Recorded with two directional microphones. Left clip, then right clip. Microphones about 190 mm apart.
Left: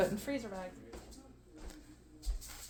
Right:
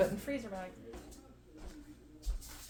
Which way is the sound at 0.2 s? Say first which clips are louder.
Even; 40° left (ahead or behind).